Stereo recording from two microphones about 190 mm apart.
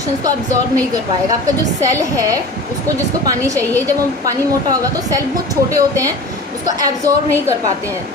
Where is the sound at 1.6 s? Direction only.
15° right (ahead or behind).